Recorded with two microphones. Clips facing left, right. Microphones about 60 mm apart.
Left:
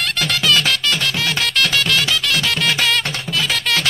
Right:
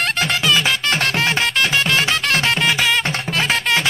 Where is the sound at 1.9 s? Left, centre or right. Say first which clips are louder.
Right 1 dB; right.